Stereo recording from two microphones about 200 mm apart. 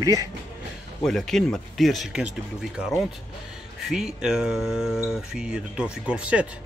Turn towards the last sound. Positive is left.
turn(degrees=-5)  # may be behind; listen again after turning